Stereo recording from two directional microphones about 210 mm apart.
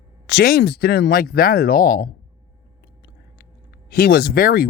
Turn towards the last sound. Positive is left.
turn(degrees=45)  # may be behind; listen again after turning